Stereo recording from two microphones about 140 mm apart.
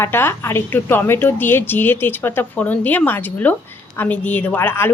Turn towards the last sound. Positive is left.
turn(degrees=15)  # may be behind; listen again after turning